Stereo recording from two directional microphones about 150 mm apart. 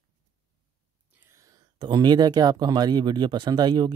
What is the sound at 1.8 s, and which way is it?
Speech, 30° right (ahead or behind).